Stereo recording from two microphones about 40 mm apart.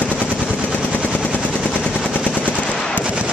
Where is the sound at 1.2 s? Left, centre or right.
Left.